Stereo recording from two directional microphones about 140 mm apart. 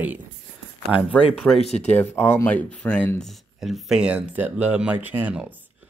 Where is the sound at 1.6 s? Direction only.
50° left (ahead or behind).